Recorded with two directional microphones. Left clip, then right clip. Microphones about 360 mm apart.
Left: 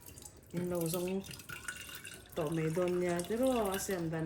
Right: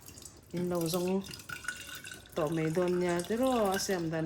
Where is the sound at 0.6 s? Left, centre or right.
Right.